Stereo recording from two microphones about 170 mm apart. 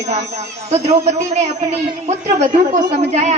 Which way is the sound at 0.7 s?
40° right (ahead or behind).